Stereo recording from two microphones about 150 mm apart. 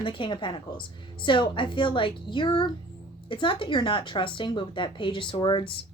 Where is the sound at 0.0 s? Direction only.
35° left (ahead or behind).